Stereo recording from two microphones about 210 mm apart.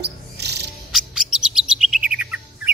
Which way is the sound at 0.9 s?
Centre (ahead or behind).